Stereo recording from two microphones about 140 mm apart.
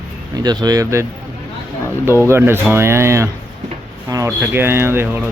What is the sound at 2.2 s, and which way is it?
Speech, 15° right (ahead or behind).